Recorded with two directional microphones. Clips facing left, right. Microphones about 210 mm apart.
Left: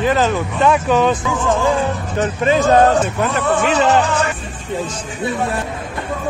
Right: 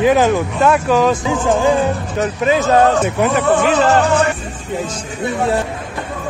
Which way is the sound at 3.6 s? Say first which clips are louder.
Right 2 dB; 55° right (ahead or behind).